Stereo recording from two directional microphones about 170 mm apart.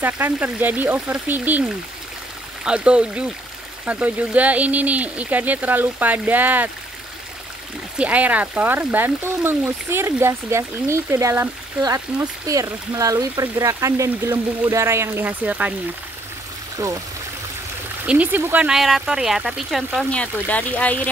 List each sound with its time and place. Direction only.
0.0 s speech: 10° right (ahead or behind)
8.0 s speech: 10° right (ahead or behind)
16.8 s speech: 15° right (ahead or behind)
18.0 s speech: 10° right (ahead or behind); by 21.1 s 10° left (ahead or behind)